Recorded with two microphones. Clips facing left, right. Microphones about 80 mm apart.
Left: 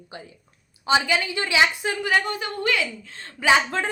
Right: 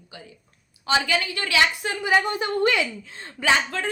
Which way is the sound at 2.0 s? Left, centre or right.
Centre.